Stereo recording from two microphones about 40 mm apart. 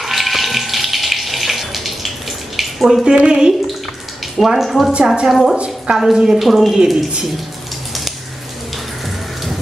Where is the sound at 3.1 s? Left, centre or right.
Right.